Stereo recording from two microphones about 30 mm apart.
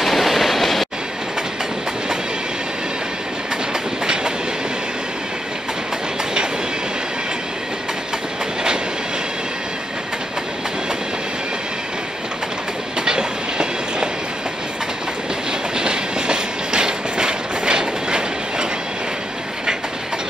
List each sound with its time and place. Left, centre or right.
0.0 s train: centre
4.0 s train: right
13.0 s train: right
15.7 s train: right